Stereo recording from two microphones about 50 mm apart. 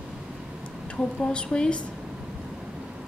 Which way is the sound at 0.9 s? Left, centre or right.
Centre.